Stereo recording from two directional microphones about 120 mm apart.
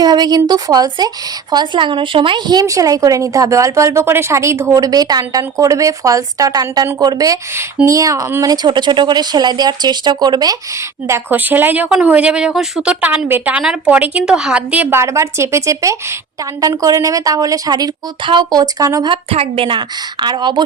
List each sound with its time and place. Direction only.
0.0 s speech: 35° right (ahead or behind)
11.1 s speech: 15° right (ahead or behind)
19.0 s a woman's voice: 50° right (ahead or behind)